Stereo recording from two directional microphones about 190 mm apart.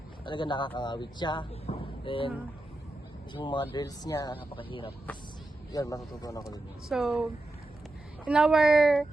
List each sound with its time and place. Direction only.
0.3 s speech: 25° left (ahead or behind)
3.3 s speech: 25° left (ahead or behind)
4.4 s speech: 30° left (ahead or behind)
5.7 s a man's voice: 15° left (ahead or behind)
6.8 s speech: centre (ahead or behind)
8.3 s speech: 5° right (ahead or behind)